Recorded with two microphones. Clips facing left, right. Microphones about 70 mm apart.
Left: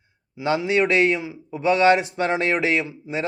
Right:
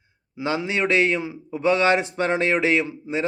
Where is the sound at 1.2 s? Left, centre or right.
Right.